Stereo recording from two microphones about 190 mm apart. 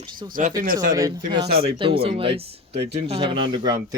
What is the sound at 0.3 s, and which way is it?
Speech, 45° right (ahead or behind).